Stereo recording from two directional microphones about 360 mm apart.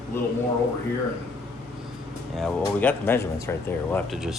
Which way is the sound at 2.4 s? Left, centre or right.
Centre.